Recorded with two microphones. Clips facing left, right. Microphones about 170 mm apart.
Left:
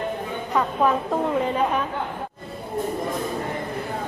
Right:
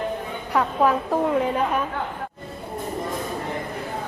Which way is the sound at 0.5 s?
5° right (ahead or behind).